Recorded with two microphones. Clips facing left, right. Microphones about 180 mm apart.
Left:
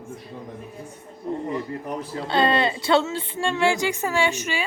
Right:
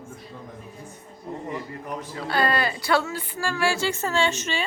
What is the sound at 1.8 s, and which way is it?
Speech, 30° left (ahead or behind).